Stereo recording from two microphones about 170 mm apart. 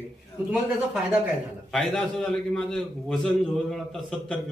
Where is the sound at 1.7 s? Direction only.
Centre (ahead or behind).